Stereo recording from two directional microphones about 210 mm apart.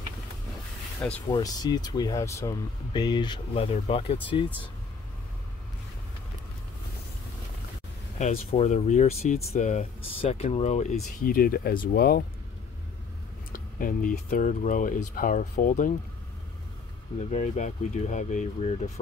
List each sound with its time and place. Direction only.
1.3 s speech: 20° left (ahead or behind)
8.2 s speech: 30° left (ahead or behind); by 12.3 s 45° left (ahead or behind)
13.5 s speech: 40° left (ahead or behind)
17.3 s speech: 35° left (ahead or behind)